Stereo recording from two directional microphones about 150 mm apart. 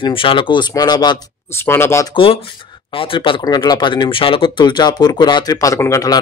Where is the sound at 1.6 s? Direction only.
15° left (ahead or behind).